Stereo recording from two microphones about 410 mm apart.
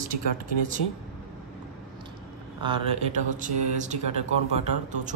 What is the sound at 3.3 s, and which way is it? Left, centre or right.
A woman's voice, centre.